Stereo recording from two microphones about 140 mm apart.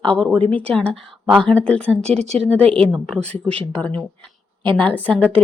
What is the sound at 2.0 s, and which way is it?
Speech, 50° right (ahead or behind).